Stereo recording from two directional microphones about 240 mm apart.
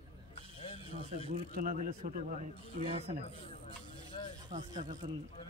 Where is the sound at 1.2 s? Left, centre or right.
Right.